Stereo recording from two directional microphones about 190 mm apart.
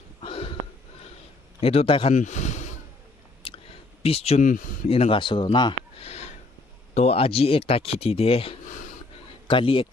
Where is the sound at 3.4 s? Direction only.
30° left (ahead or behind).